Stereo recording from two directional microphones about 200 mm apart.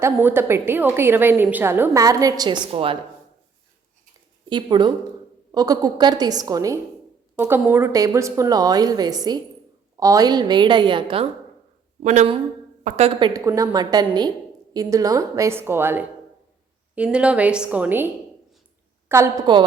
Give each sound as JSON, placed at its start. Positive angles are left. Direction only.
{"t": 0.0, "sound": "a woman's voice", "side_deg": -10}
{"t": 4.4, "sound": "a woman's voice", "side_deg": -20}